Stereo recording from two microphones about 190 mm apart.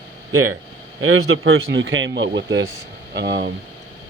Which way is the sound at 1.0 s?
90° right.